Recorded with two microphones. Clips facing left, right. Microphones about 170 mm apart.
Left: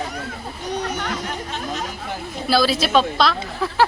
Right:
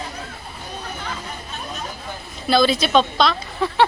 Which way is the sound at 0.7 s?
85° left.